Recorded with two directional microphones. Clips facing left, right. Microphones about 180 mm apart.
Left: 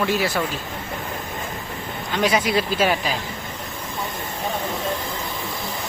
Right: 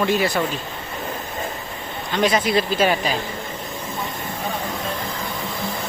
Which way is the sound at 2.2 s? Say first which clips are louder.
Right 1 dB; 10° left (ahead or behind).